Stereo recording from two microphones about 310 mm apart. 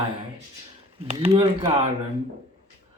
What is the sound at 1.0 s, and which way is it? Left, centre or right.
Speech, centre.